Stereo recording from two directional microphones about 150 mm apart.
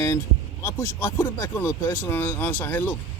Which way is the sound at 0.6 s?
15° left (ahead or behind).